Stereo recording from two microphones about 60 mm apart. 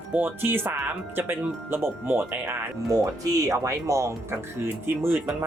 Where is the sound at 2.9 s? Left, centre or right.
Right.